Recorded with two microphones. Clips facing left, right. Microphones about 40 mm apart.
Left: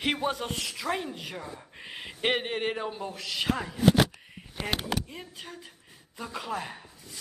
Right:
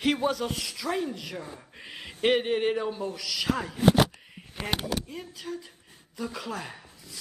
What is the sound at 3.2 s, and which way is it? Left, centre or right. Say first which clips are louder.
Speech: left 3 dB; left.